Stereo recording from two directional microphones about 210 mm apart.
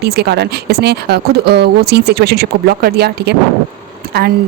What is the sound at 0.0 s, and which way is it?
A woman's voice, 50° right (ahead or behind).